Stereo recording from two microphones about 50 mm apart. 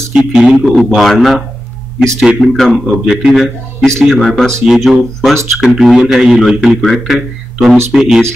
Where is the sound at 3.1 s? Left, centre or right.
Centre.